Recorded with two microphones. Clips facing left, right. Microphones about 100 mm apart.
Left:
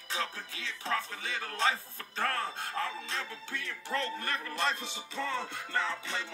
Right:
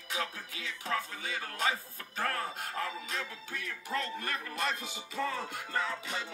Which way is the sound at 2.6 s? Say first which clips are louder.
Left 1 dB; 30° left (ahead or behind).